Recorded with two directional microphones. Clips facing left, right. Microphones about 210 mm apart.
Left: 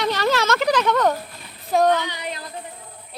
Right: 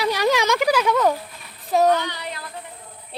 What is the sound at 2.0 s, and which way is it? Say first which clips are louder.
Child singing: left 1 dB; 15° left (ahead or behind).